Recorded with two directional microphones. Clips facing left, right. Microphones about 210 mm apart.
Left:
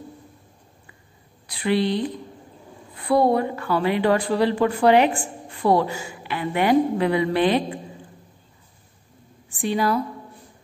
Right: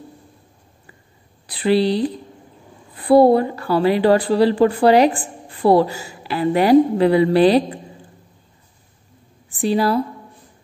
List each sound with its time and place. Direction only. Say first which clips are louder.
1.5 s a woman's voice: right 5 dB; 35° right (ahead or behind)
9.5 s a woman's voice: right 4 dB; 35° right (ahead or behind)